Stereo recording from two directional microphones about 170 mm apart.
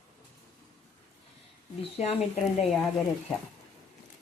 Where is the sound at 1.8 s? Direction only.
35° left (ahead or behind).